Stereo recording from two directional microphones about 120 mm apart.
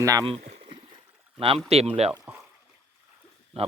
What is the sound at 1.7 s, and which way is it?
Speech, 60° right (ahead or behind).